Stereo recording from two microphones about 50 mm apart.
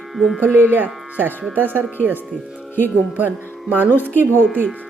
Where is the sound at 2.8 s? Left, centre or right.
Right.